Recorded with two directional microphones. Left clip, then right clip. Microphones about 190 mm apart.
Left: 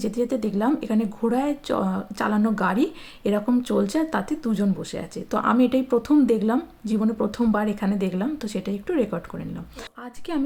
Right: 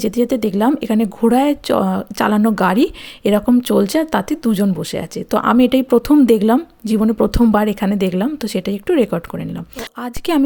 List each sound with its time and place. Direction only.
0.0 s speech: 45° right (ahead or behind)